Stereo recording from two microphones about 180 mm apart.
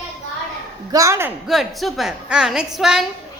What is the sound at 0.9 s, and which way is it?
Speech, 15° right (ahead or behind).